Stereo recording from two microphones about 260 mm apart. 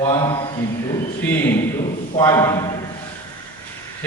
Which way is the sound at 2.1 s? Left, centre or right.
Centre.